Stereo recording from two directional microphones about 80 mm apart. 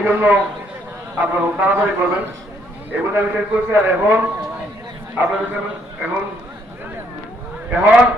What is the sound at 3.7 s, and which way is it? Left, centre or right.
Speech, right.